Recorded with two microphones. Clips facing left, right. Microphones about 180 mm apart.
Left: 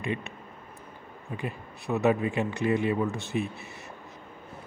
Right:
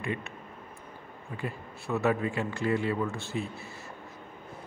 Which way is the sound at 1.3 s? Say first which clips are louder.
Left 2 dB; 20° left (ahead or behind).